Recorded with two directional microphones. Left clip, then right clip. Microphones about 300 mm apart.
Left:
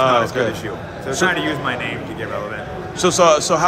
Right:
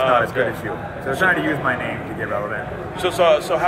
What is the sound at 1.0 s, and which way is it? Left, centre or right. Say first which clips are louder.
Speech: even; centre.